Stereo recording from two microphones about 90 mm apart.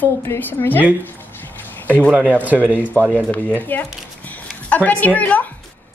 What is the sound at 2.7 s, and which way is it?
A woman's voice, 15° left (ahead or behind).